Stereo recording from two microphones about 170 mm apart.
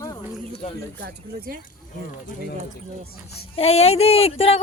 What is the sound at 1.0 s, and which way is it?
Speech, 65° right (ahead or behind).